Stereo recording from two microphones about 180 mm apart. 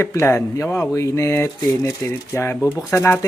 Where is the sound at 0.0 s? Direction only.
15° left (ahead or behind).